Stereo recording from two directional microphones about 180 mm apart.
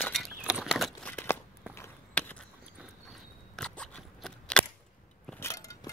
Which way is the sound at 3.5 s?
5° left (ahead or behind).